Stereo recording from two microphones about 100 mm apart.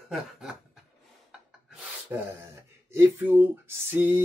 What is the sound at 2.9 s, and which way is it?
Speech, 25° right (ahead or behind).